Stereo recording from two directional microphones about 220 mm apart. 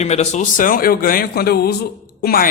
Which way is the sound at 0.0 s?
30° left (ahead or behind).